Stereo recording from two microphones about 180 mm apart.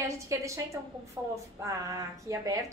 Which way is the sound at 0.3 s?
15° right (ahead or behind).